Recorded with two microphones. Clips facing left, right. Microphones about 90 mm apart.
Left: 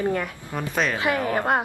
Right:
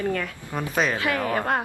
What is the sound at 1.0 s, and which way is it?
Speech, 20° left (ahead or behind).